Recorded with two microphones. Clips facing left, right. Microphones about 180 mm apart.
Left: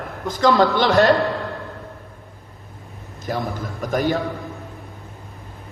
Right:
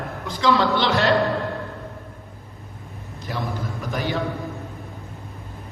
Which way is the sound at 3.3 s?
50° left (ahead or behind).